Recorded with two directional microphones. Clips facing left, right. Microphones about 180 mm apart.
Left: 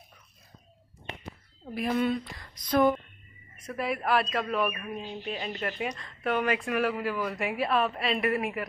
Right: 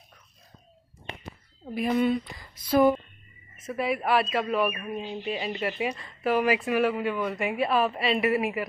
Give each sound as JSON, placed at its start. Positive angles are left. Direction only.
{"t": 1.7, "sound": "speech", "side_deg": 0}